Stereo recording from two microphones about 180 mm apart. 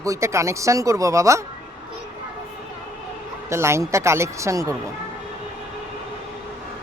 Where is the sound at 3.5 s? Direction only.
15° right (ahead or behind).